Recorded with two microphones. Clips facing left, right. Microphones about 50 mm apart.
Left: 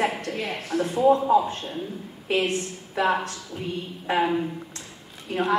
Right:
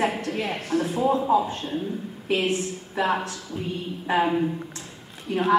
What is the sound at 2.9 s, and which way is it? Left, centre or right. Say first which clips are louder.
A woman's voice: left 1 dB; centre.